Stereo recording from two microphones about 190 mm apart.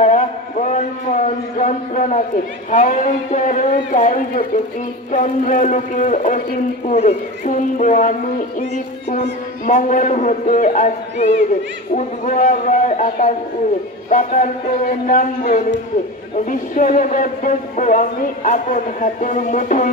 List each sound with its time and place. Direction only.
0.0 s a sound: 40° left (ahead or behind)
2.7 s speech: 40° left (ahead or behind)
9.7 s speech: 40° left (ahead or behind)